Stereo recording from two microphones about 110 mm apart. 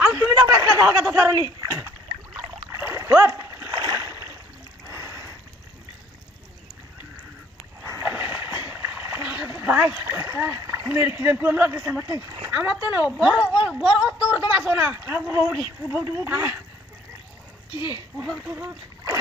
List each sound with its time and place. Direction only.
0.0 s a sound: 25° right (ahead or behind)
0.8 s speech: 25° right (ahead or behind)
2.3 s splash: 25° right (ahead or behind)
3.8 s rowboat: 35° right (ahead or behind)
4.8 s a sound: 30° right (ahead or behind)
8.0 s a sound: 20° right (ahead or behind)
9.5 s dog: 20° right (ahead or behind)
9.9 s speech: 25° right (ahead or behind)
12.4 s speech: 15° right (ahead or behind)
14.7 s speech: 20° right (ahead or behind)
18.3 s speech: 25° right (ahead or behind)